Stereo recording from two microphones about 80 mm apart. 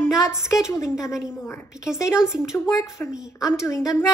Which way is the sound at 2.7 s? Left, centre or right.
Left.